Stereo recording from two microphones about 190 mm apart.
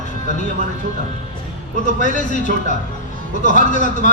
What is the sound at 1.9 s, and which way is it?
A man's voice, 40° left (ahead or behind).